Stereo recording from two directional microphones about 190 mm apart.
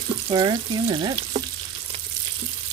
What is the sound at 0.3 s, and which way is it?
Frying, 25° right (ahead or behind).